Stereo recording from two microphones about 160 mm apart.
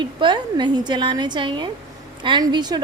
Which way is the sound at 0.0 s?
30° right (ahead or behind).